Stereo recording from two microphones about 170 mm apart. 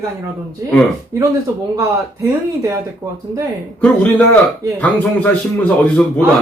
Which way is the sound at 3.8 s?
10° left (ahead or behind).